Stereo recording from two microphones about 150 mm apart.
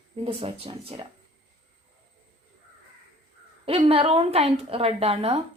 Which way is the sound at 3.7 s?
40° right (ahead or behind).